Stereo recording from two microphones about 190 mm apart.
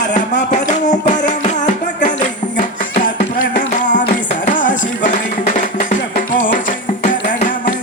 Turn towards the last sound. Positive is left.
turn(degrees=45)  # may be behind; listen again after turning